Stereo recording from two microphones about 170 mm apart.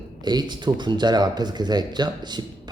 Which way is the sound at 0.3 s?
25° right (ahead or behind).